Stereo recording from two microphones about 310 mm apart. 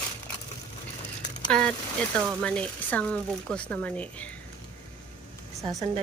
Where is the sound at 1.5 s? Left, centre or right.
Centre.